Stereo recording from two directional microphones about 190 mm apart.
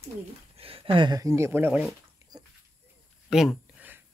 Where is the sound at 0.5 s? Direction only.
30° right (ahead or behind); by 1.8 s 10° right (ahead or behind).